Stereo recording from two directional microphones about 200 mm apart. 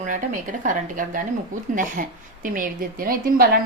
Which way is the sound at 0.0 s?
40° right (ahead or behind).